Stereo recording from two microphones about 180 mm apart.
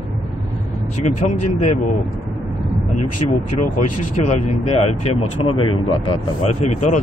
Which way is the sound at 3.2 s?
30° left (ahead or behind).